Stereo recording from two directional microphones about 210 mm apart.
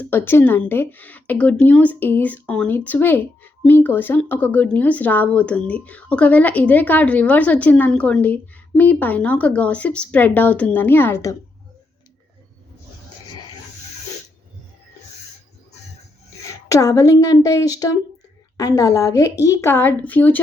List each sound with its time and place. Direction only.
0.0 s a woman's voice: 10° left (ahead or behind)
16.6 s a woman's voice: 15° left (ahead or behind)